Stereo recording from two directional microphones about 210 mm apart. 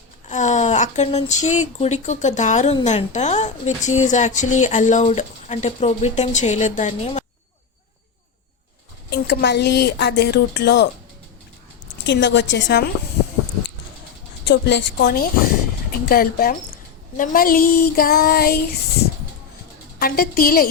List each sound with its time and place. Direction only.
0.3 s speech: 35° left (ahead or behind)
9.0 s a woman's voice: 50° left (ahead or behind)
12.0 s a woman's voice: 55° left (ahead or behind)
14.4 s a woman's voice: 55° left (ahead or behind)
20.0 s a woman's voice: 45° left (ahead or behind)